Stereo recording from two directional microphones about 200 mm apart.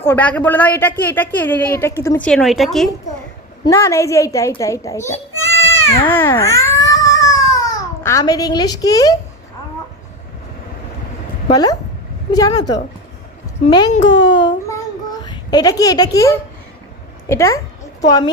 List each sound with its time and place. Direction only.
0.0 s a woman's voice: 10° left (ahead or behind)
3.6 s a child's voice: 15° left (ahead or behind)
11.5 s a woman's voice: 20° left (ahead or behind)
14.3 s a sound: 25° left (ahead or behind)
15.2 s a woman's voice: 20° left (ahead or behind)